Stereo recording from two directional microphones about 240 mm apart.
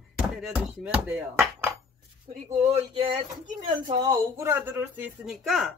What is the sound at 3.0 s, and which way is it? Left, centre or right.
Speech, right.